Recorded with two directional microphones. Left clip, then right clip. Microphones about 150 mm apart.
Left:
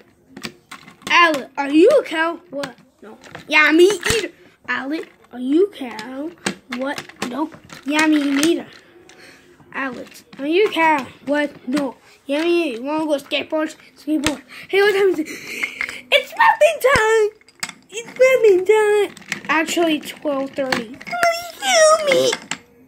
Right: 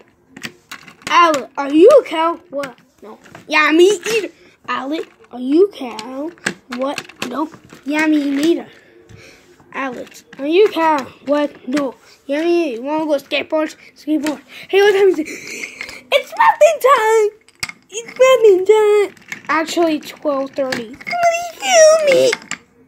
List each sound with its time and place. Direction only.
1.0 s a sound: 10° left (ahead or behind)
1.4 s speech: 10° left (ahead or behind)
3.4 s speech: centre (ahead or behind)
7.9 s speech: 5° left (ahead or behind)
8.2 s a child's voice: 25° left (ahead or behind)
8.5 s speech: centre (ahead or behind)
9.2 s a sound: centre (ahead or behind)
10.3 s a child's voice: centre (ahead or behind); by 18.6 s 20° right (ahead or behind)
18.6 s speech: centre (ahead or behind)
21.3 s a sound: centre (ahead or behind)